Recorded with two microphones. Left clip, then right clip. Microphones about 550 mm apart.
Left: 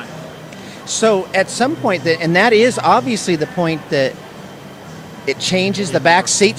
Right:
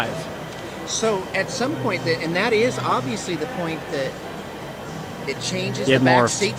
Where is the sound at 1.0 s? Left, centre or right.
Left.